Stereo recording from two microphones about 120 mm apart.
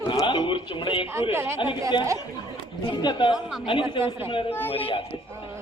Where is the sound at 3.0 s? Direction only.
40° left (ahead or behind).